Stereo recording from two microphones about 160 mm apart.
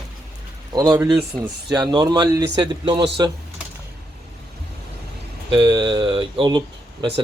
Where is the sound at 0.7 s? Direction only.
25° right (ahead or behind).